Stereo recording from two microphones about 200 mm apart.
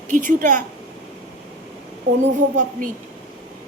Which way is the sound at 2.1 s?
45° right (ahead or behind).